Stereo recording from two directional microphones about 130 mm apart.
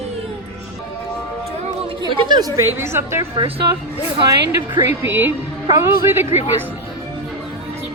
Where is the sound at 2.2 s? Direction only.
35° right (ahead or behind).